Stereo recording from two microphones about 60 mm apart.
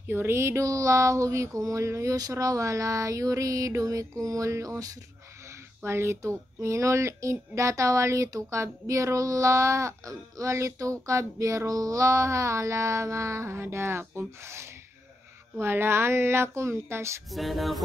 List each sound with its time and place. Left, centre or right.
0.0 s speech: right
2.3 s a sound: right
5.9 s speech: right
17.3 s music: centre